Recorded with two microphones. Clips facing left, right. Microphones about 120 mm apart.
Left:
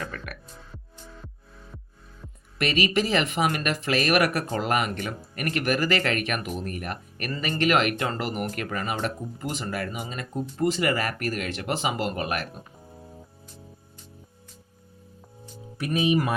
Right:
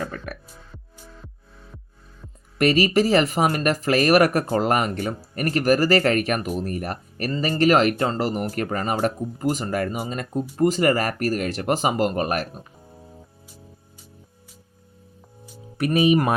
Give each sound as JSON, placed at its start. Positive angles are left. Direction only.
{"t": 0.0, "sound": "speech", "side_deg": -30}
{"t": 2.6, "sound": "speech", "side_deg": -40}
{"t": 12.9, "sound": "music", "side_deg": 0}
{"t": 15.8, "sound": "speech", "side_deg": -60}